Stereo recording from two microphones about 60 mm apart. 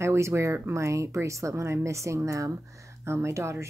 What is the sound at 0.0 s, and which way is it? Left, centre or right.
Speech, right.